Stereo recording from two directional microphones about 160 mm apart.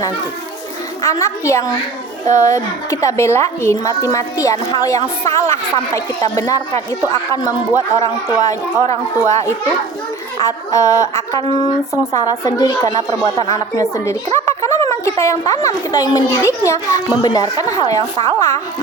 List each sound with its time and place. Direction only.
1.0 s a woman's voice: 20° left (ahead or behind)